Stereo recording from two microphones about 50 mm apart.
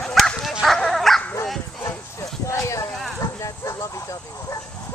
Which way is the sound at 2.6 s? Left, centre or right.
Left.